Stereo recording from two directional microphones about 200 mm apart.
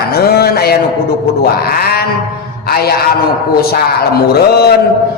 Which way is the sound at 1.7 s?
50° left (ahead or behind).